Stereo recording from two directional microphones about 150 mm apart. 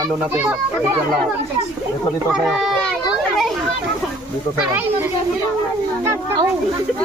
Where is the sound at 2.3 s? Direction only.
5° right (ahead or behind).